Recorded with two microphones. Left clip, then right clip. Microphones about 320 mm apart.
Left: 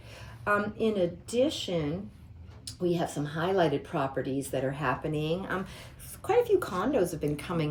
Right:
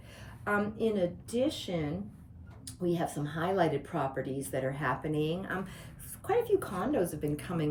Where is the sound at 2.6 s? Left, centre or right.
Centre.